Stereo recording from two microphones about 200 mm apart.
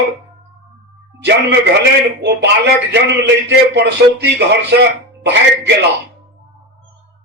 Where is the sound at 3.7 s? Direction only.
55° right (ahead or behind).